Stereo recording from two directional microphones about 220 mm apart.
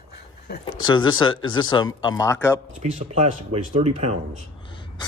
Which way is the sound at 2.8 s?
30° right (ahead or behind).